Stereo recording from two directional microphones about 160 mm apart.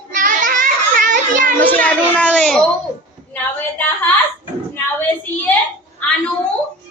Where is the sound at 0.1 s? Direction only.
55° right (ahead or behind).